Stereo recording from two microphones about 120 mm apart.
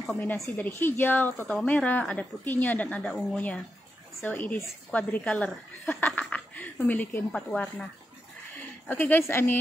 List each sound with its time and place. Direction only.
0.0 s a woman's voice: 10° left (ahead or behind)